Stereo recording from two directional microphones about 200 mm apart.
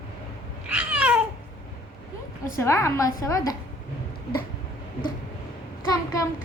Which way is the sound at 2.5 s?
15° left (ahead or behind).